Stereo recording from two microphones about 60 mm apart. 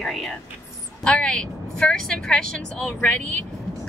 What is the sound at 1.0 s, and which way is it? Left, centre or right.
Speech, centre.